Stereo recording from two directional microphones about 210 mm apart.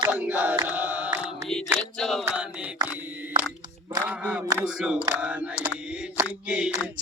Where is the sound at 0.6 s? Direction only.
10° right (ahead or behind).